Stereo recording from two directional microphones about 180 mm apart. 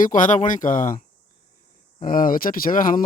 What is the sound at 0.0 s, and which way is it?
Speech, 45° left (ahead or behind).